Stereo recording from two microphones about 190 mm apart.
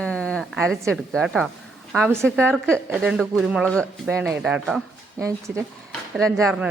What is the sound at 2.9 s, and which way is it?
A woman's voice, 5° right (ahead or behind).